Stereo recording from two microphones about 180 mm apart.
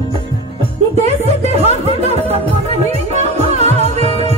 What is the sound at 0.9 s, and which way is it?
Speech, 35° right (ahead or behind).